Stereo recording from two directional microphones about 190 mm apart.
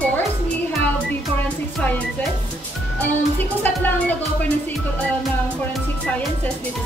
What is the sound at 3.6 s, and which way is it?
Speech, 10° left (ahead or behind).